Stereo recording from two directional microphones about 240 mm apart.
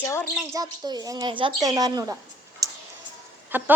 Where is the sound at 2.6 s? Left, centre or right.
Centre.